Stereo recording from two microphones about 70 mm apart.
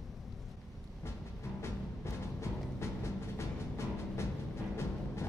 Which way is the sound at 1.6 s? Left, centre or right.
Left.